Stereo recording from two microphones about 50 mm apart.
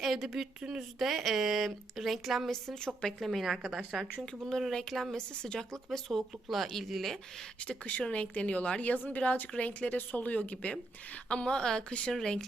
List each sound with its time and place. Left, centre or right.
0.0 s a woman's voice: centre
2.5 s a woman's voice: centre
3.2 s a woman's voice: centre
4.3 s a woman's voice: centre
5.1 s a woman's voice: centre
5.9 s a woman's voice: centre
7.6 s a woman's voice: left